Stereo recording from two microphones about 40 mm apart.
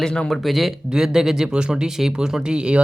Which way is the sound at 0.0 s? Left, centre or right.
Left.